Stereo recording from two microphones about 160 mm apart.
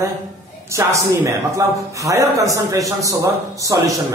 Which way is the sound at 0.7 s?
15° right (ahead or behind).